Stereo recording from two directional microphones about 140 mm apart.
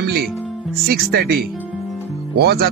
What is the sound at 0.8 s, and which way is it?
Speech, 90° right.